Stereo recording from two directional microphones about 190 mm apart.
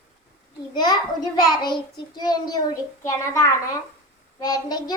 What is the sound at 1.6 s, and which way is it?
A child's voice, 20° left (ahead or behind).